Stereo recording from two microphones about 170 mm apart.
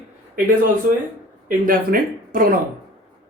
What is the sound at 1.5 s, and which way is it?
Speech, 55° right (ahead or behind).